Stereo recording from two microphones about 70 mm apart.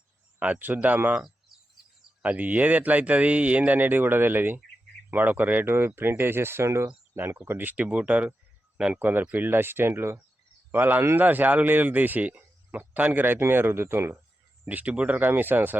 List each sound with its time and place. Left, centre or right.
0.3 s speech: right
2.2 s speech: right
7.4 s speech: right
14.6 s speech: right